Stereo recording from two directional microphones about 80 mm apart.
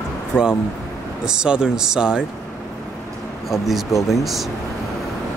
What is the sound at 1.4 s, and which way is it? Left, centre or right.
Speech, centre.